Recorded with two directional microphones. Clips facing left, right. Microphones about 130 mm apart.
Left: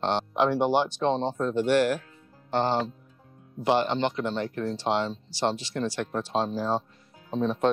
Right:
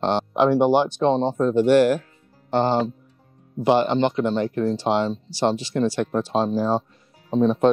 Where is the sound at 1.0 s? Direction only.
45° right (ahead or behind).